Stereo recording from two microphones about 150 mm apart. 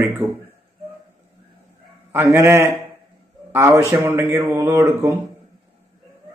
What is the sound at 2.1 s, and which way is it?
Speech, 20° right (ahead or behind).